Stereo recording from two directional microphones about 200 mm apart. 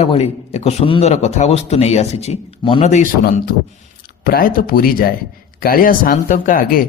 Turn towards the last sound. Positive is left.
turn(degrees=45)  # may be behind; listen again after turning